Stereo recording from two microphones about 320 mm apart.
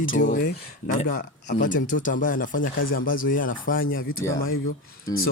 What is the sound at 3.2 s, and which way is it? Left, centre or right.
Speech, left.